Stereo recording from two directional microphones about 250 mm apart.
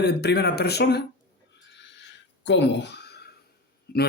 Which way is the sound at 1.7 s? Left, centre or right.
Left.